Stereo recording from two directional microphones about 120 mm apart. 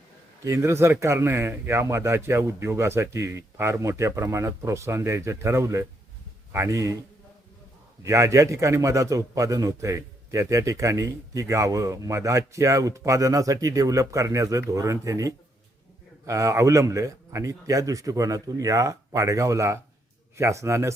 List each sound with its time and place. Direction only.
0.4 s a man's voice: 25° right (ahead or behind)
8.0 s a man's voice: 25° right (ahead or behind)